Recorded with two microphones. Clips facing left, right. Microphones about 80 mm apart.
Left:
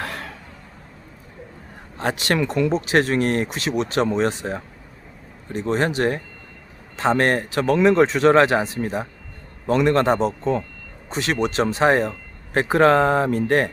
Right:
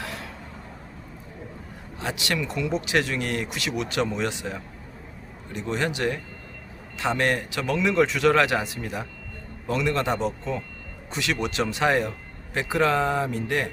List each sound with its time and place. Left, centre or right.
0.0 s a sound: left
2.0 s speech: left
2.7 s a man's voice: left
9.7 s a man's voice: left
12.5 s speech: left